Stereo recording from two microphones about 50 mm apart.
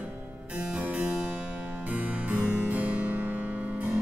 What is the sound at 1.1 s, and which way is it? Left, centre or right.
Music, right.